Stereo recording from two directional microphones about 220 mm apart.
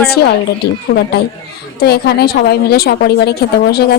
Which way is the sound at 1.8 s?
45° left (ahead or behind).